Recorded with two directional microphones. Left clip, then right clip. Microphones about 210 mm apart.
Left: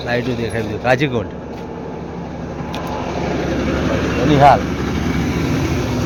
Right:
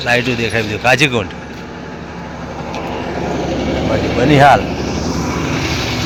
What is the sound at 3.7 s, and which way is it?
Vehicle, 15° right (ahead or behind).